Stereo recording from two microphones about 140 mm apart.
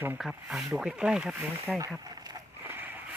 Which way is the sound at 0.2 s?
5° right (ahead or behind).